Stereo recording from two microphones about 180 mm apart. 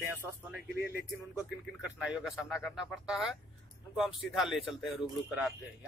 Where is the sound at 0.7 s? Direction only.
60° left (ahead or behind).